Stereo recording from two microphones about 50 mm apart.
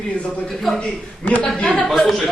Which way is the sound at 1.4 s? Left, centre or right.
Left.